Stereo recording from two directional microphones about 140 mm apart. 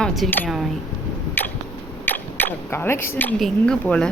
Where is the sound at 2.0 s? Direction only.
15° left (ahead or behind).